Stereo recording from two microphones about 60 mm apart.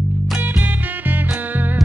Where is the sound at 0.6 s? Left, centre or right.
Right.